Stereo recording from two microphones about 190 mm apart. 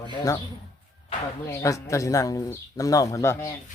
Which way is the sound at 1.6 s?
15° left (ahead or behind).